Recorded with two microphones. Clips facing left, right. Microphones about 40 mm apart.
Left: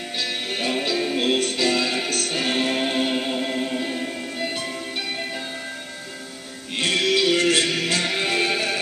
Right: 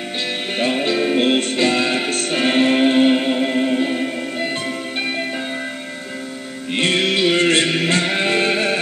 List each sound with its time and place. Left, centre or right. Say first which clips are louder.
0.6 s music: right 6 dB; right
6.7 s music: right 3 dB; right